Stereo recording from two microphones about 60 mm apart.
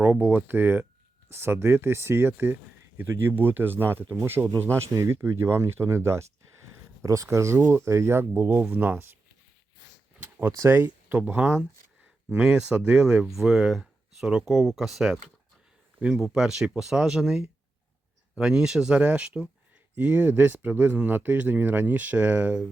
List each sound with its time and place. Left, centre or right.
0.0 s speech: right
7.0 s speech: right
10.2 s a sound: right
10.8 s speech: right
12.3 s speech: centre
13.2 s speech: centre; by 22.6 s right